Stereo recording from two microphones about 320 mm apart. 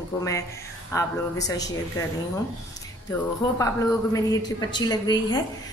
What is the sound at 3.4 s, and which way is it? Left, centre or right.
Speech, centre.